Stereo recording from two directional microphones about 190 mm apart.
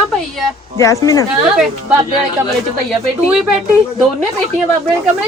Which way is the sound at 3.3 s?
5° right (ahead or behind).